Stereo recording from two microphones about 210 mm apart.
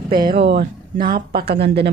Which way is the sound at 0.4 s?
50° right (ahead or behind).